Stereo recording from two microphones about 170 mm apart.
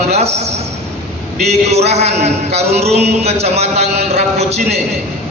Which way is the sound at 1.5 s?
40° right (ahead or behind).